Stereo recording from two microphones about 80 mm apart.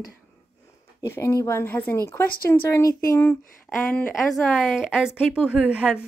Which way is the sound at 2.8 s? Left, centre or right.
Left.